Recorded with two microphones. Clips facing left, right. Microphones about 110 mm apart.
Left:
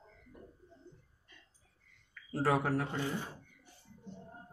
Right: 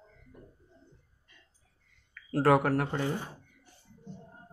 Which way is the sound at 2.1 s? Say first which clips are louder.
Right 7 dB; 90° right.